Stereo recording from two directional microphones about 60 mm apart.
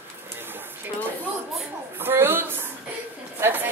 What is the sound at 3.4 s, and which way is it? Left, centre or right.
Speech, right.